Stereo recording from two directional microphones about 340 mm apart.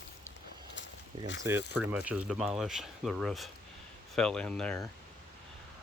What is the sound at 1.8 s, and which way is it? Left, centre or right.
Speech, centre.